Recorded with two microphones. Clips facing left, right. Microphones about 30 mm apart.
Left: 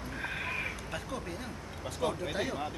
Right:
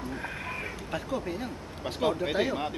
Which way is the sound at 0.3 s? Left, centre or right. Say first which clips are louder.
Even; centre.